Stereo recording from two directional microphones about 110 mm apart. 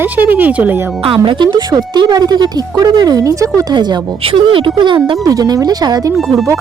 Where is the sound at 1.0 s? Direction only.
55° right (ahead or behind); by 3.7 s 30° right (ahead or behind).